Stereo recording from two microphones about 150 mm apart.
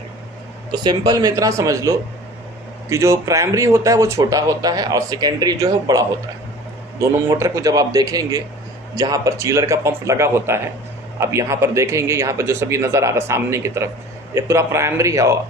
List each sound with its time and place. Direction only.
0.7 s speech: 30° right (ahead or behind)